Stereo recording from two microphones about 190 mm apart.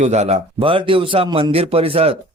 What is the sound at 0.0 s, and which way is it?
Speech, 35° right (ahead or behind).